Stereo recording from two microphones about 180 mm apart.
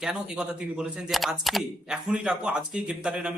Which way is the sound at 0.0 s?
5° right (ahead or behind).